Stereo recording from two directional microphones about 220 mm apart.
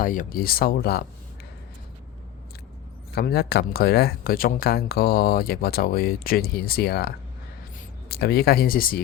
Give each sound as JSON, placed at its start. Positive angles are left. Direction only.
{"t": 0.0, "sound": "speech", "side_deg": 40}
{"t": 3.2, "sound": "speech", "side_deg": 45}